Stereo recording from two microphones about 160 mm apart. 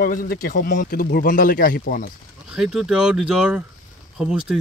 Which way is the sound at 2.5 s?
5° right (ahead or behind).